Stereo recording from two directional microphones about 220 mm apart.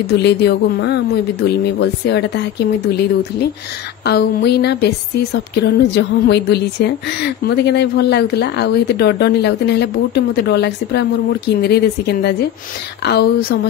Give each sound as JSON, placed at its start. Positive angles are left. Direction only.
{"t": 0.0, "sound": "a woman's voice", "side_deg": 50}